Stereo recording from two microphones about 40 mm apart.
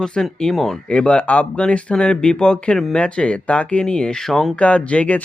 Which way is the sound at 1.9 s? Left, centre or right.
Left.